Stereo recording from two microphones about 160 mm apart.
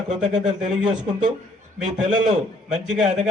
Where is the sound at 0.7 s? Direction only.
5° right (ahead or behind).